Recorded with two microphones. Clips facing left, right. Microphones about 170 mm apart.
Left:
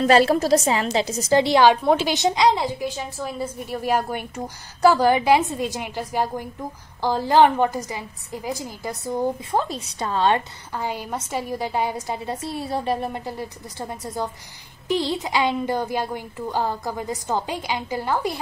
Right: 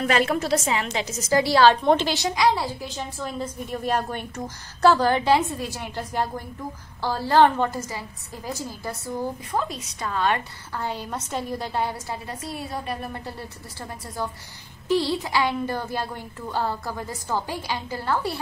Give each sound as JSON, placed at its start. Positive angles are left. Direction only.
{"t": 0.0, "sound": "a woman's voice", "side_deg": 35}
{"t": 1.8, "sound": "a woman's voice", "side_deg": 5}
{"t": 2.1, "sound": "a woman's voice", "side_deg": 20}
{"t": 3.2, "sound": "a woman's voice", "side_deg": 5}
{"t": 9.6, "sound": "a woman's voice", "side_deg": 30}
{"t": 10.8, "sound": "a woman's voice", "side_deg": 10}